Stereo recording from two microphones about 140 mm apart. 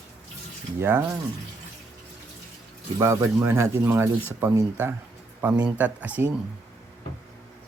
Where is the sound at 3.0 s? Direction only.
20° right (ahead or behind).